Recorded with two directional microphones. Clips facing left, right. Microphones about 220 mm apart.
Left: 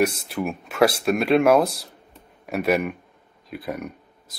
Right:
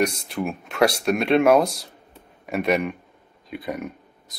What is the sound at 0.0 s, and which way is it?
Speech, centre (ahead or behind).